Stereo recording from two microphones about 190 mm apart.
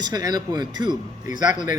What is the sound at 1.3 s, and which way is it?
Speech, 40° left (ahead or behind).